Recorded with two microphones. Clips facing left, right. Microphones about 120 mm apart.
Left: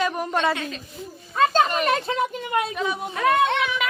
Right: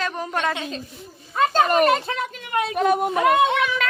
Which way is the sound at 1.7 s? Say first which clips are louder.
Right 4 dB; 50° right (ahead or behind).